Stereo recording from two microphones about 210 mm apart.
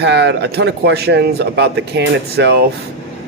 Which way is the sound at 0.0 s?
55° right (ahead or behind).